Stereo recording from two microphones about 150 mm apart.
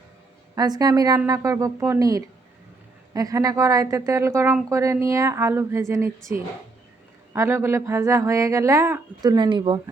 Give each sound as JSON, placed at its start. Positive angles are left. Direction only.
{"t": 0.5, "sound": "speech", "side_deg": -25}